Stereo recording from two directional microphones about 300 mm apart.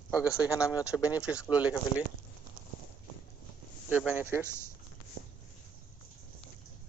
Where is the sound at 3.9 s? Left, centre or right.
Centre.